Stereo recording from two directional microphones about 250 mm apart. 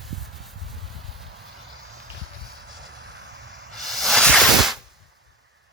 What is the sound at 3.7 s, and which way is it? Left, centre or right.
Hiss, centre.